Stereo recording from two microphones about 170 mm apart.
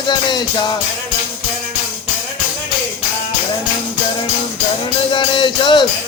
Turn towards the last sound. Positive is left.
turn(degrees=25)  # may be behind; listen again after turning